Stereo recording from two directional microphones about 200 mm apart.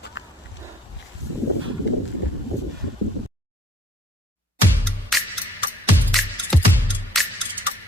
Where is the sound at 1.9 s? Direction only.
60° left (ahead or behind).